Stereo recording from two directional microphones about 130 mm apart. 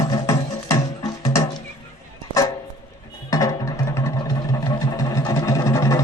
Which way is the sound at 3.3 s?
25° left (ahead or behind).